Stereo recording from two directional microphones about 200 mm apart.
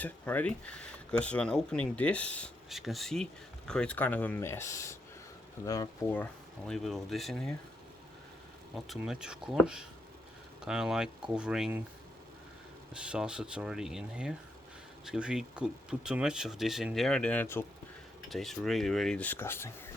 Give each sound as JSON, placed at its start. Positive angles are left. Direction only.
{"t": 0.0, "sound": "speech", "side_deg": 5}
{"t": 6.7, "sound": "speech", "side_deg": 0}
{"t": 8.9, "sound": "speech", "side_deg": -5}
{"t": 12.9, "sound": "speech", "side_deg": -5}